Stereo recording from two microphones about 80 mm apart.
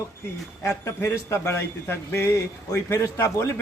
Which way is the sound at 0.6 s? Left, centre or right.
Left.